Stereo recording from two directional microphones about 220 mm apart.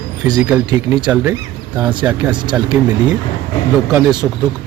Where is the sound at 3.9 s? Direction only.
15° right (ahead or behind).